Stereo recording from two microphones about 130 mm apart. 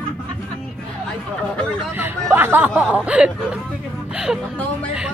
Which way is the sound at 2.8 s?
10° right (ahead or behind).